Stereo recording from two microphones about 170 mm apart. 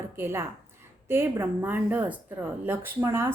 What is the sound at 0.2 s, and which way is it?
A woman's voice, 15° right (ahead or behind).